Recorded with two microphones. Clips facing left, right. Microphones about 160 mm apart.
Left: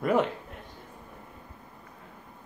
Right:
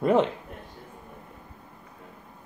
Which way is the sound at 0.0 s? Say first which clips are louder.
Right 3 dB; 25° right (ahead or behind).